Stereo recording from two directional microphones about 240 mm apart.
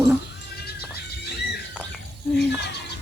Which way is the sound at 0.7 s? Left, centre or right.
Left.